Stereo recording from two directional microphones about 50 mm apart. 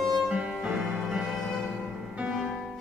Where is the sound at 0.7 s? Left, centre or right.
Centre.